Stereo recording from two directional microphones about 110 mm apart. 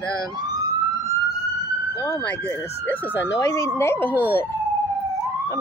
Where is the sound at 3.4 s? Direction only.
25° left (ahead or behind).